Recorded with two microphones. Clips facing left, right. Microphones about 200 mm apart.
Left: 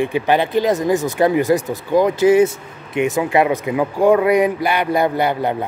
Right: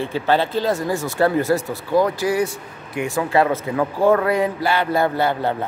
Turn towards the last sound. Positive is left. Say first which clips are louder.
# left 2 dB
turn(degrees=15)  # may be behind; listen again after turning